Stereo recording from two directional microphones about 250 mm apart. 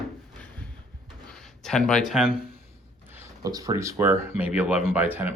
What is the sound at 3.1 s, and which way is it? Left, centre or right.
Speech, centre.